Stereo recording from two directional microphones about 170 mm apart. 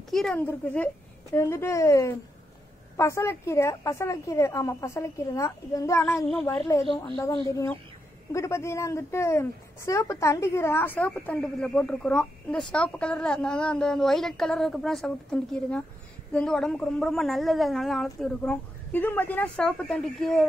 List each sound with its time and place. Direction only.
0.1 s a woman's voice: centre (ahead or behind)
1.3 s a woman's voice: 15° left (ahead or behind)